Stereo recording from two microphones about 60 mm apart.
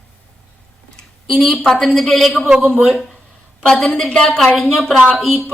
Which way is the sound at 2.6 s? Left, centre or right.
Right.